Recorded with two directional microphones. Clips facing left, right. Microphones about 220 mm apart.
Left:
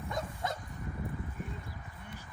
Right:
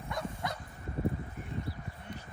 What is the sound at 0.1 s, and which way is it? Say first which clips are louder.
Dog: even; 20° left (ahead or behind).